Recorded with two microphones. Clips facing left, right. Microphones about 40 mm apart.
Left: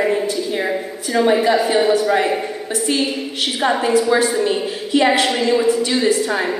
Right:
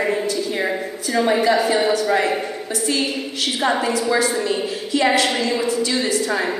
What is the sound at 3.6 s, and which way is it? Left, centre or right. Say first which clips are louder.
Speech: left 2 dB; centre.